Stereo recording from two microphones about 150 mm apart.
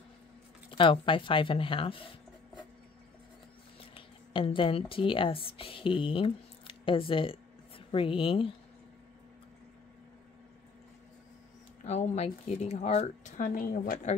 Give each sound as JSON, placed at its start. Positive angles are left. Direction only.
{"t": 0.7, "sound": "speech", "side_deg": 35}
{"t": 3.9, "sound": "speech", "side_deg": 35}
{"t": 11.8, "sound": "speech", "side_deg": 45}
{"t": 13.4, "sound": "a woman's voice", "side_deg": 65}